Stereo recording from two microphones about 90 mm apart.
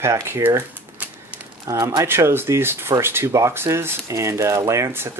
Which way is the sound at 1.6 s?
40° right (ahead or behind).